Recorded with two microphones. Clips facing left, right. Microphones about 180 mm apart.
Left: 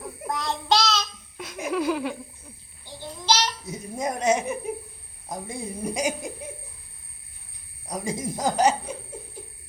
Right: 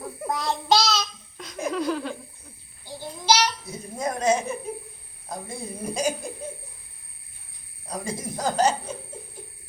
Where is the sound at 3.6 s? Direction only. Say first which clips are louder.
Even; 20° left (ahead or behind).